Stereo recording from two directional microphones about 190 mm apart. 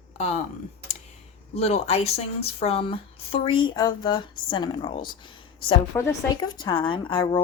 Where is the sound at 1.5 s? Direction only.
35° left (ahead or behind).